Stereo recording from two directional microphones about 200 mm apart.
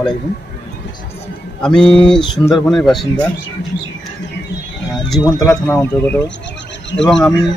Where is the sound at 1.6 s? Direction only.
5° left (ahead or behind).